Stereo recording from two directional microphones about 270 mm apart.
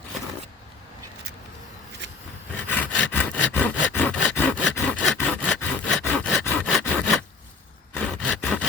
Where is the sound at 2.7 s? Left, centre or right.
Centre.